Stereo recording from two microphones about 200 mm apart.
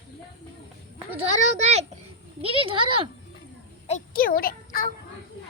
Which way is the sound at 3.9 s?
40° left (ahead or behind).